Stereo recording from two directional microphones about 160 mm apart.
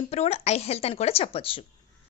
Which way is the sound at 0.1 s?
40° left (ahead or behind).